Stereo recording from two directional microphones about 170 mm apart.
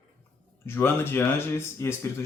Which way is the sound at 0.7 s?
15° left (ahead or behind).